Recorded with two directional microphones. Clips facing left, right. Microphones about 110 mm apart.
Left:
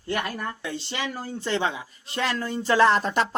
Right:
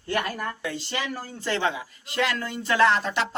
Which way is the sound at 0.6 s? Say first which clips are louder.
Even; 25° left (ahead or behind).